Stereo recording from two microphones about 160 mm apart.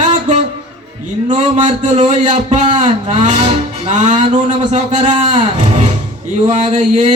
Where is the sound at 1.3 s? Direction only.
45° right (ahead or behind).